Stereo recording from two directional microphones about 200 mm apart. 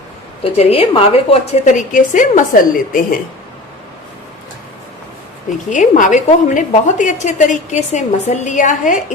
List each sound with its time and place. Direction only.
0.4 s a woman's voice: 30° left (ahead or behind)
5.7 s a woman's voice: 40° left (ahead or behind)